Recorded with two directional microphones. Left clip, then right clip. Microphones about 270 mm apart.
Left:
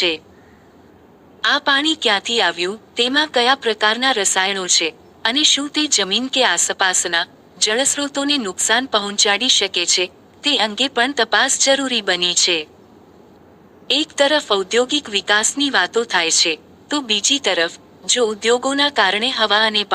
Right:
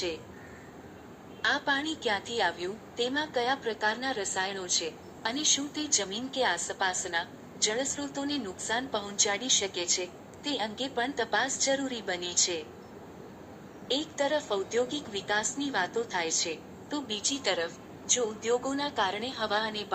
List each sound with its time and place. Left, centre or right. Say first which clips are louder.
1.4 s a woman's voice: left 12 dB; left
13.8 s a woman's voice: left 14 dB; left